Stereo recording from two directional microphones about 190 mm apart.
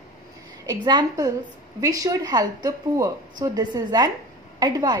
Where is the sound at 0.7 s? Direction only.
20° right (ahead or behind).